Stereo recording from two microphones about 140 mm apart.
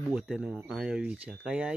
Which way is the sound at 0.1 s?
5° right (ahead or behind).